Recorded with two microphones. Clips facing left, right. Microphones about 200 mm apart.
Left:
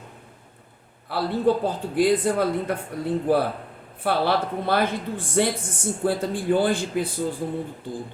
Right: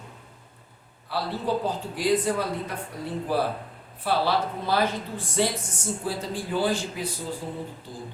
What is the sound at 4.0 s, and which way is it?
A man's voice, 55° left (ahead or behind).